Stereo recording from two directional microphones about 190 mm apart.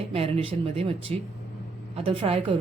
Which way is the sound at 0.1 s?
30° right (ahead or behind).